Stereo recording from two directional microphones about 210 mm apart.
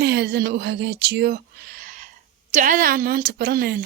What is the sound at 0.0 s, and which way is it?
A woman's voice, 50° right (ahead or behind).